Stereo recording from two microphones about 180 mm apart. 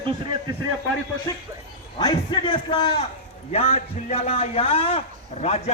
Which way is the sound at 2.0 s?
25° left (ahead or behind).